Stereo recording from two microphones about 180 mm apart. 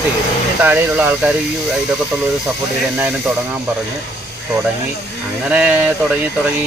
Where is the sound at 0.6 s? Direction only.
10° right (ahead or behind).